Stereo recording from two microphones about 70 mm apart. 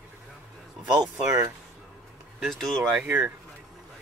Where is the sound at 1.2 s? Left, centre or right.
Right.